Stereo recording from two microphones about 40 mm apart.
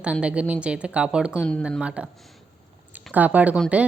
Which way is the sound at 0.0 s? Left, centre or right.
Right.